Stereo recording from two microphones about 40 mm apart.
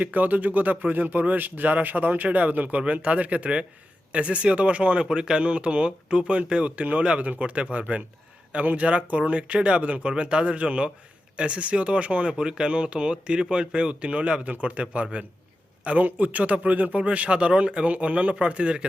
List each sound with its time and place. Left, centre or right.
0.0 s speech: right
5.0 s speech: right
12.3 s speech: centre; by 17.0 s right
17.0 s speech: right